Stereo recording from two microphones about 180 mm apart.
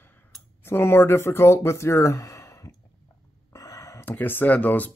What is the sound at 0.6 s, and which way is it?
Speech, 15° left (ahead or behind).